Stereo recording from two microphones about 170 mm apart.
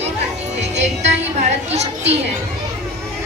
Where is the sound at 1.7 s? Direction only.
40° right (ahead or behind).